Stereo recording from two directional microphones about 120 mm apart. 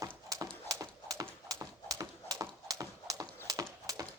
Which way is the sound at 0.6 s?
30° right (ahead or behind).